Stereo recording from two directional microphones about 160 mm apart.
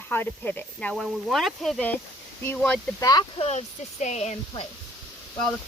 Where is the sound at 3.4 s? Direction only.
45° left (ahead or behind).